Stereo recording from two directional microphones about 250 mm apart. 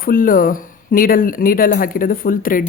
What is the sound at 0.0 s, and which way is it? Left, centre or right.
Speech, left.